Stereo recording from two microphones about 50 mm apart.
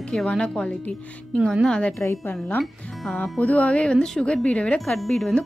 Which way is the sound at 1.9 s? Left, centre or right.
Left.